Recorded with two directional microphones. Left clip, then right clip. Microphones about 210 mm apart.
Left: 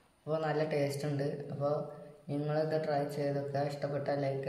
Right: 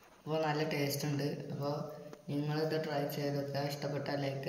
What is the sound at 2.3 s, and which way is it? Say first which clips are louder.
A man's voice: left 3 dB; 25° left (ahead or behind).